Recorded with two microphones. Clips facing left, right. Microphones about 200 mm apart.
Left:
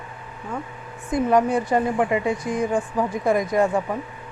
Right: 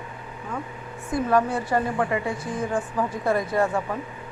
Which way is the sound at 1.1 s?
15° left (ahead or behind).